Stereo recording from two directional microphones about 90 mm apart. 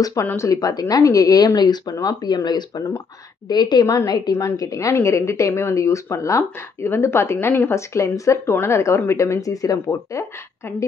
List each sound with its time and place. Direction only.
0.0 s a woman's voice: 40° left (ahead or behind)